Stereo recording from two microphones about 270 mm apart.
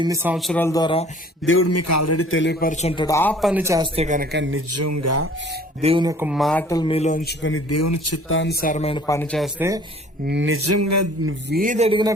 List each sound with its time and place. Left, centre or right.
0.0 s speech: centre
1.5 s a man's voice: left
2.3 s a man's voice: left; by 3.5 s centre
3.5 s speech: centre
3.9 s speech: right
4.7 s a sound: right
5.8 s speech: centre; by 7.2 s left
7.3 s a man's voice: left
7.7 s speech: left
8.3 s a man's voice: left
8.6 s speech: left; by 9.5 s centre
9.6 s speech: centre
10.2 s a sound: right
11.3 s a man's voice: right; by 12.1 s centre